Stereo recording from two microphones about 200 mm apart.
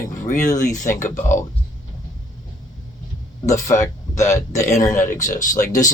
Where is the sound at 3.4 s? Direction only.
15° left (ahead or behind).